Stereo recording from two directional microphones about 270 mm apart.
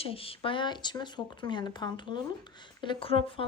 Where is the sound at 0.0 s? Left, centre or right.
Left.